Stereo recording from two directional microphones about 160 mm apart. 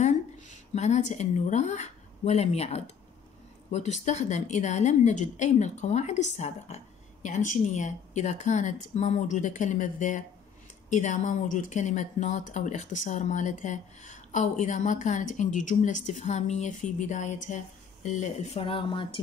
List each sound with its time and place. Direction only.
0.0 s a woman's voice: 45° left (ahead or behind); by 19.1 s 30° left (ahead or behind)